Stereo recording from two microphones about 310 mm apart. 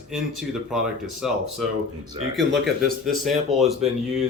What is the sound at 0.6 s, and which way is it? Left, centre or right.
Speech, centre.